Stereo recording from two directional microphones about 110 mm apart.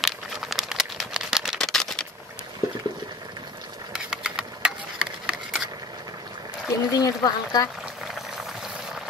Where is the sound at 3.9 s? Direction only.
5° right (ahead or behind).